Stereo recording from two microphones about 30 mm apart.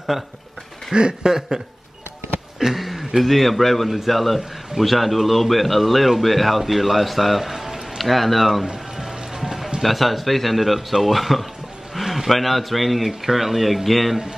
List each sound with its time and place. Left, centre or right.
0.1 s speech: centre
0.9 s speech: right
2.7 s a sound: centre
3.2 s a man's voice: centre
7.4 s music: centre
8.0 s a man's voice: centre
8.7 s music: centre
9.8 s a man's voice: centre